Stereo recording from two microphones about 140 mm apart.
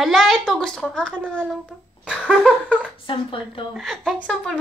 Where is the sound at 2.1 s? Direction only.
Centre (ahead or behind).